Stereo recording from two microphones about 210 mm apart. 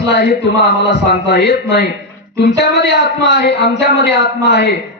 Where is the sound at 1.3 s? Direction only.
55° left (ahead or behind).